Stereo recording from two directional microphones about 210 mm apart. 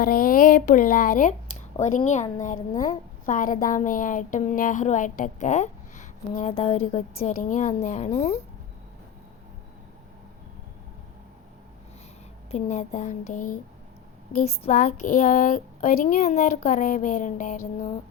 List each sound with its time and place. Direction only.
0.0 s a woman's voice: 45° left (ahead or behind)
12.5 s a woman's voice: 30° left (ahead or behind)